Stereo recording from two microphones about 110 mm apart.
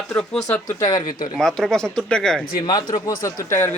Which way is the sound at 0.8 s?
35° left (ahead or behind).